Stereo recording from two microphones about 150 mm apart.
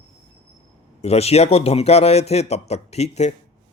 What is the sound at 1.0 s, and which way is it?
Speech, 45° left (ahead or behind).